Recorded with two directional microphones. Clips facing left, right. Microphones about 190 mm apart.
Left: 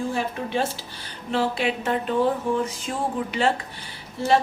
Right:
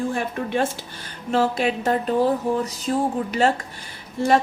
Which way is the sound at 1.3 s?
45° right (ahead or behind).